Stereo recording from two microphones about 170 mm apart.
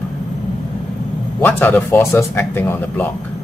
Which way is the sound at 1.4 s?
10° left (ahead or behind).